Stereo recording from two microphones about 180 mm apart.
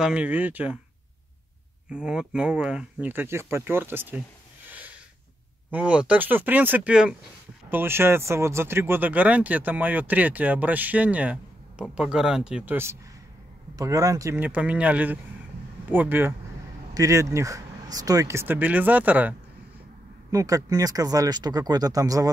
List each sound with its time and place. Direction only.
0.0 s speech: 5° right (ahead or behind)
1.9 s speech: 5° right (ahead or behind)
4.6 s a sound: 10° right (ahead or behind)
5.7 s speech: 5° right (ahead or behind)
20.2 s speech: 20° right (ahead or behind)